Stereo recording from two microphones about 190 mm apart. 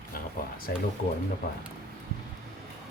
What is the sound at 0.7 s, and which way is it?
Speech, 55° left (ahead or behind).